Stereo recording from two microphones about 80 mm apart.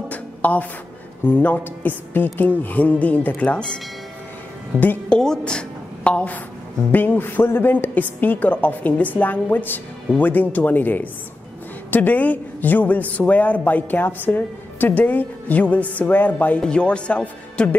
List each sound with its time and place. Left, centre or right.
0.1 s music: centre
1.2 s speech: left
4.7 s speech: left
5.2 s a woman's voice: centre